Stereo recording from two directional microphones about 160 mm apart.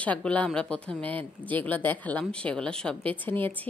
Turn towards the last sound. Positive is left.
turn(degrees=10)  # may be behind; listen again after turning